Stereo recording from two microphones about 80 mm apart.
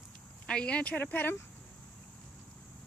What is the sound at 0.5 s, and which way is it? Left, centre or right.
Speech, centre.